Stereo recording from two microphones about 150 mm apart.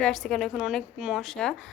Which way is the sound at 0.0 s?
5° left (ahead or behind).